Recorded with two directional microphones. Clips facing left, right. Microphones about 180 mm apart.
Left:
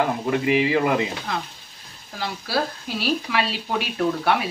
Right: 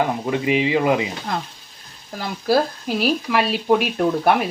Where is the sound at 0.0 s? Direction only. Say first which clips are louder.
Right 1 dB; 20° right (ahead or behind).